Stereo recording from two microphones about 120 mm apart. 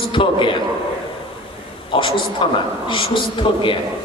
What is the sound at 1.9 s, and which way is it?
A man's voice, 45° left (ahead or behind).